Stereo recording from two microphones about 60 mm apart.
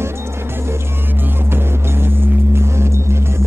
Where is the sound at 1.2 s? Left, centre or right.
Right.